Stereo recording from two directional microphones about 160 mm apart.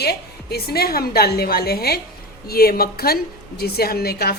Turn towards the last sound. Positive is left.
turn(degrees=80)